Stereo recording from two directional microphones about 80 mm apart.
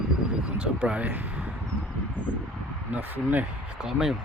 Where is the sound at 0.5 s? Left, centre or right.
Centre.